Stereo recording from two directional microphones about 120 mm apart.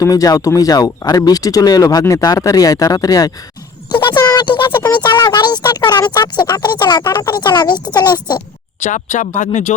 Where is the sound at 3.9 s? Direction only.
40° left (ahead or behind).